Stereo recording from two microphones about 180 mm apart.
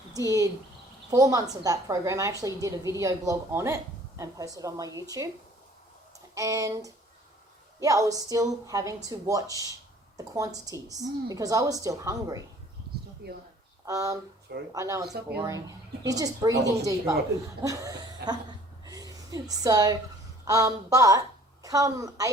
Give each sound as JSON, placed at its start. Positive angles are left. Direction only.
{"t": 0.1, "sound": "a woman's voice", "side_deg": -20}
{"t": 6.3, "sound": "a sound", "side_deg": -20}
{"t": 7.8, "sound": "a woman's voice", "side_deg": -20}
{"t": 13.2, "sound": "speech", "side_deg": -60}
{"t": 13.8, "sound": "a woman's voice", "side_deg": -20}
{"t": 14.7, "sound": "a sound", "side_deg": -20}
{"t": 15.4, "sound": "a woman's voice", "side_deg": -20}